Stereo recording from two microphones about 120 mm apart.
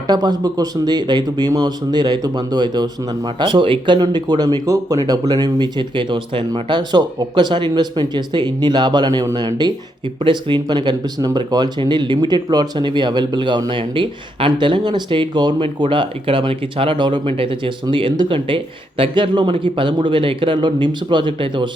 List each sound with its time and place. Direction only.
0.1 s speech: 35° right (ahead or behind)
10.2 s speech: 40° right (ahead or behind)